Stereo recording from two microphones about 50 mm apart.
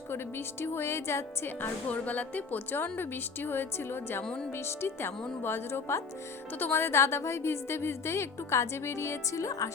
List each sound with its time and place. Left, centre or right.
0.1 s a woman's voice: left
1.9 s music: left
2.7 s a woman's voice: left
4.2 s speech: centre
4.5 s a woman's voice: left